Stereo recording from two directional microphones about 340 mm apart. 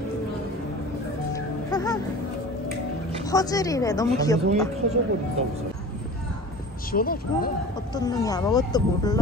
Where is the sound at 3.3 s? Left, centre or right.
Centre.